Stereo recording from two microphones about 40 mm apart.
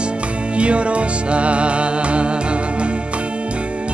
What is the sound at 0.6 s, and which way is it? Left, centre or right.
Music, right.